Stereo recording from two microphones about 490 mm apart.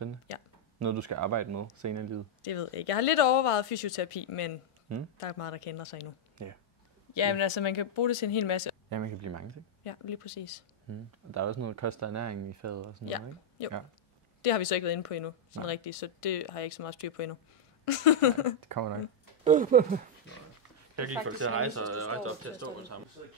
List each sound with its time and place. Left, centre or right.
0.8 s speech: right
2.4 s speech: left
6.3 s speech: right
7.2 s speech: left
8.8 s speech: right
9.8 s speech: left
10.9 s speech: right
14.4 s speech: left
18.6 s speech: right
19.4 s speech: centre
20.9 s speech: right